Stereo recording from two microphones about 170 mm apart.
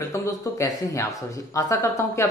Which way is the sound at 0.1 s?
15° left (ahead or behind).